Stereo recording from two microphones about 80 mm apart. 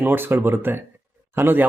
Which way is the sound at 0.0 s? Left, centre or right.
Right.